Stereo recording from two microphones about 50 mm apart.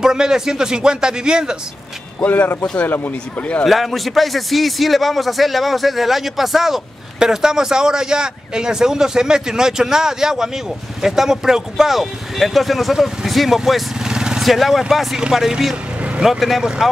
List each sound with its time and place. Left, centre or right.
0.0 s speech: centre
2.2 s speech: left
2.6 s speech: centre
3.3 s speech: left
3.6 s a man's voice: centre
14.0 s vehicle: centre
14.4 s a man's voice: centre